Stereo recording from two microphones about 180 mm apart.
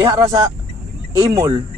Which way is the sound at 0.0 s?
20° right (ahead or behind).